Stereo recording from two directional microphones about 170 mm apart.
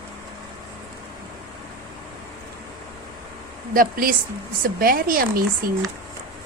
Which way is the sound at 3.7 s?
55° right (ahead or behind).